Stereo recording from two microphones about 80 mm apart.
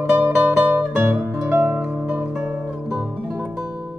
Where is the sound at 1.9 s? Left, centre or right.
Right.